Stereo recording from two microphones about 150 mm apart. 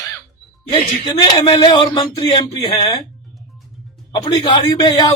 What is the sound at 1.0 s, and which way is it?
Speech, 35° left (ahead or behind).